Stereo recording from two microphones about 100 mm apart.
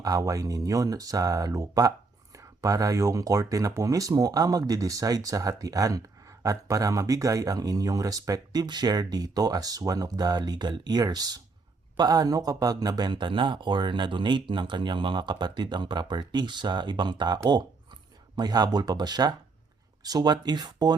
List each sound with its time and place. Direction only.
0.0 s speech: 35° right (ahead or behind)